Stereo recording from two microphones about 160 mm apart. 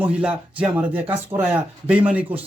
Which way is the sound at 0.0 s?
5° right (ahead or behind).